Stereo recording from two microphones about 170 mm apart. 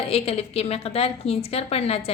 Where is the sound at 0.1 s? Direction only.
35° left (ahead or behind).